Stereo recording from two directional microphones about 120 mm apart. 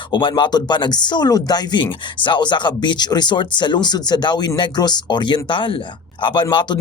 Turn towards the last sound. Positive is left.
turn(degrees=40)  # may be behind; listen again after turning